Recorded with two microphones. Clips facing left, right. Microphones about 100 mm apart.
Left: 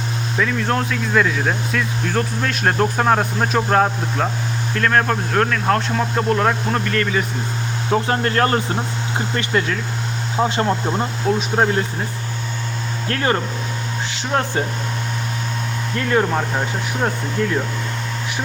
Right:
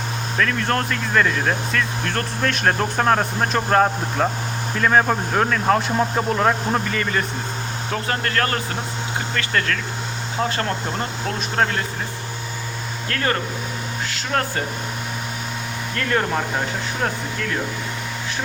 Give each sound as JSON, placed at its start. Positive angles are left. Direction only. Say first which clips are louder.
{"t": 0.3, "sound": "speech", "louder": "left 1 dB", "side_deg": 5}
{"t": 7.9, "sound": "speech", "louder": "left 6 dB", "side_deg": 25}
{"t": 13.1, "sound": "speech", "louder": "left 3 dB", "side_deg": 25}
{"t": 16.0, "sound": "speech", "louder": "left 3 dB", "side_deg": 5}